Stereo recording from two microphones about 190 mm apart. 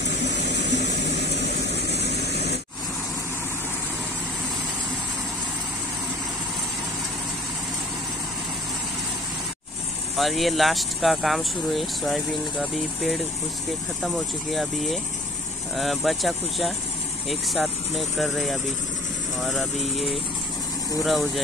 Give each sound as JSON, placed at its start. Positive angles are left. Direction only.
{"t": 0.1, "sound": "vehicle", "side_deg": 65}
{"t": 10.1, "sound": "speech", "side_deg": 0}